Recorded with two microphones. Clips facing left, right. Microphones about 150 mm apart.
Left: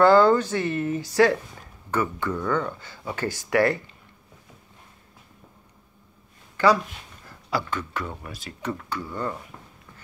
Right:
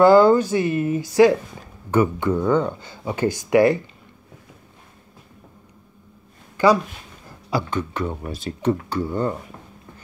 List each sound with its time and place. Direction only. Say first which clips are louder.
0.0 s speech: right 4 dB; 10° right (ahead or behind)
6.5 s a sound: right 3 dB; 15° right (ahead or behind)
7.2 s speech: right 3 dB; 15° right (ahead or behind)